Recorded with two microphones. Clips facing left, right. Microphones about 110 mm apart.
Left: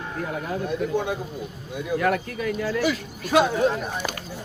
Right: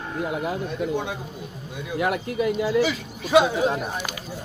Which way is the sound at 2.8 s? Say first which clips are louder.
Even; centre (ahead or behind).